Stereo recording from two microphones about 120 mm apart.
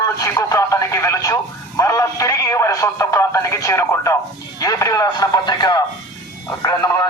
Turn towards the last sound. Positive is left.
turn(degrees=30)  # may be behind; listen again after turning